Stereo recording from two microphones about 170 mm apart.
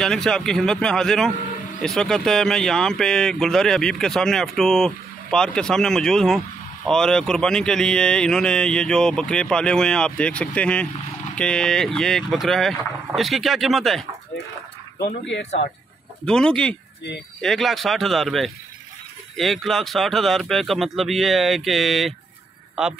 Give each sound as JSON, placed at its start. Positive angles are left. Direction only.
{"t": 0.0, "sound": "speech", "side_deg": 5}
{"t": 16.3, "sound": "speech", "side_deg": 5}